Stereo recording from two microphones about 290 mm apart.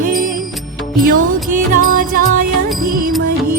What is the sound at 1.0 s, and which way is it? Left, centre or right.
Music, right.